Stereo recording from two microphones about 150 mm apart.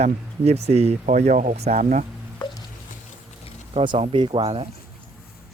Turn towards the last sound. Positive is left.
turn(degrees=-40)  # may be behind; listen again after turning